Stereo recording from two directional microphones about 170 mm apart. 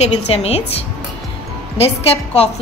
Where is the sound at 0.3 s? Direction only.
35° left (ahead or behind).